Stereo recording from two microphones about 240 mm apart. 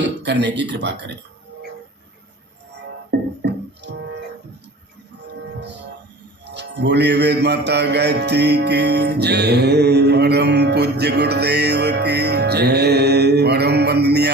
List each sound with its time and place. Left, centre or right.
0.2 s speech: right
3.1 s music: right
6.4 s music: right